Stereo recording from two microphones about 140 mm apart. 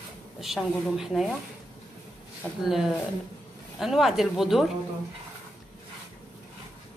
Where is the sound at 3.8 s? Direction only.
Centre (ahead or behind).